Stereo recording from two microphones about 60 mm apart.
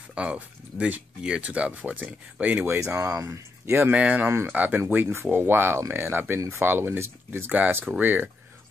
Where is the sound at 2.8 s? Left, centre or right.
Right.